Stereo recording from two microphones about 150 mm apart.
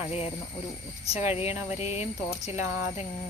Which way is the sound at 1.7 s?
45° left (ahead or behind).